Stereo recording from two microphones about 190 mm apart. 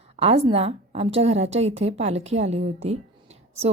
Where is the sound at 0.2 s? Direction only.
35° right (ahead or behind).